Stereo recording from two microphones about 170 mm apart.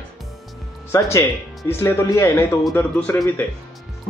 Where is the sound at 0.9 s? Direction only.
15° left (ahead or behind).